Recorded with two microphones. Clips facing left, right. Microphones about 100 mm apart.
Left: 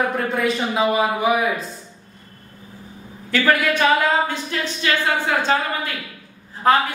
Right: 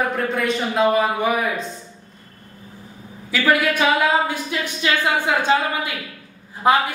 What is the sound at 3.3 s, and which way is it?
A man's voice, 5° right (ahead or behind).